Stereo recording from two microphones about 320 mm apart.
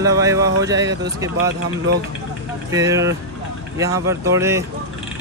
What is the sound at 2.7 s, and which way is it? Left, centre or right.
Speech, centre.